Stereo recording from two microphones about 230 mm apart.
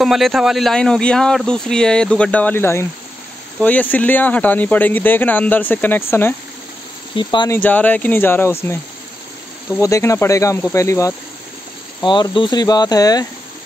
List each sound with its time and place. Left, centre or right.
0.0 s speech: centre
9.8 s speech: centre